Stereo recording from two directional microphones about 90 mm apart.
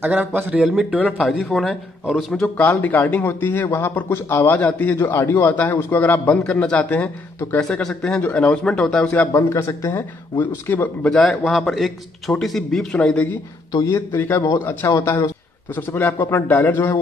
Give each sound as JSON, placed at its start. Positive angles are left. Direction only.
{"t": 0.0, "sound": "speech", "side_deg": -20}
{"t": 0.6, "sound": "speech", "side_deg": -5}
{"t": 2.6, "sound": "a man's voice", "side_deg": 25}
{"t": 9.0, "sound": "a man's voice", "side_deg": 20}
{"t": 9.3, "sound": "a man's voice", "side_deg": 30}
{"t": 11.1, "sound": "speech", "side_deg": 5}
{"t": 13.7, "sound": "a man's voice", "side_deg": 45}
{"t": 13.9, "sound": "a man's voice", "side_deg": 30}
{"t": 15.0, "sound": "a man's voice", "side_deg": 30}
{"t": 15.7, "sound": "a man's voice", "side_deg": 20}